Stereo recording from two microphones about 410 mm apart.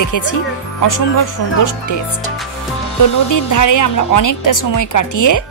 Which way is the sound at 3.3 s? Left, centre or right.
Left.